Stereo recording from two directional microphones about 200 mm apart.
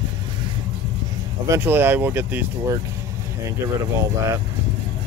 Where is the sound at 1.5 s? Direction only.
10° right (ahead or behind).